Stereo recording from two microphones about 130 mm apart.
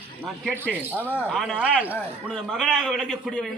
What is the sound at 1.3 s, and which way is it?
A man's voice, 5° left (ahead or behind).